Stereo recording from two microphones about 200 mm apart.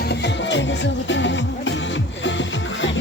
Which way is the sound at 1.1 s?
65° left (ahead or behind).